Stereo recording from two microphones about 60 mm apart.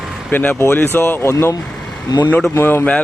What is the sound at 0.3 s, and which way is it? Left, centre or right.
Speech, left.